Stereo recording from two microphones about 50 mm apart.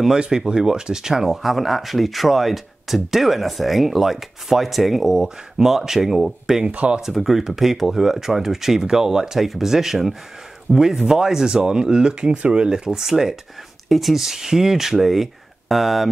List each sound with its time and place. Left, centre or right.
0.0 s speech: centre
6.7 s speech: right
7.0 s speech: centre